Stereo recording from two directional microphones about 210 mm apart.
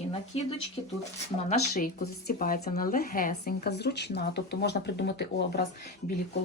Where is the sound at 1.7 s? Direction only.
45° left (ahead or behind).